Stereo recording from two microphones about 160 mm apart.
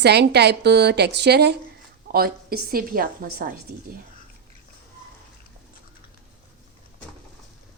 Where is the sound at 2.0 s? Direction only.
70° right (ahead or behind).